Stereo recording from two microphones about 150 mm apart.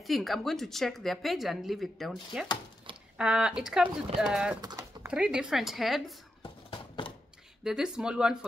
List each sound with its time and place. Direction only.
0.0 s a woman's voice: centre (ahead or behind)
4.6 s speech: 25° right (ahead or behind)
5.0 s a woman's voice: 5° right (ahead or behind)
7.6 s a woman's voice: 5° right (ahead or behind)